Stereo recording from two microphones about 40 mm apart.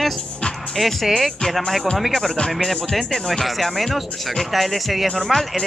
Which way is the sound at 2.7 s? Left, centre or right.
Centre.